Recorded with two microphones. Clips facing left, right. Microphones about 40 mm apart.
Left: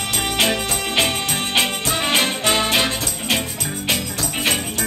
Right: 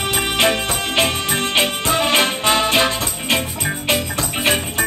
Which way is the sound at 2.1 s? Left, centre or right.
Right.